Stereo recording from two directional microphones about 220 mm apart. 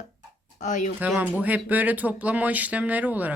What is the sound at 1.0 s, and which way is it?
Speech, 5° right (ahead or behind).